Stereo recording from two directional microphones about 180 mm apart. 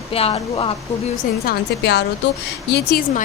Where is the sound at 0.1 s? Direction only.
30° left (ahead or behind).